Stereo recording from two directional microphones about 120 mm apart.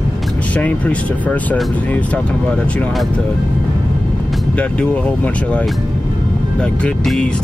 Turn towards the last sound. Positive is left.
turn(degrees=5)  # may be behind; listen again after turning